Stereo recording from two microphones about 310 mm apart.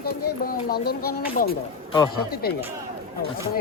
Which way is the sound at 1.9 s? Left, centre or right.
Centre.